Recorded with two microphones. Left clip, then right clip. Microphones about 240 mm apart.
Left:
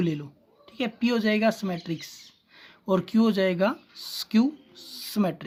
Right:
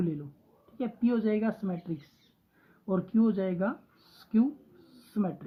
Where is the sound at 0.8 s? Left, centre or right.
Left.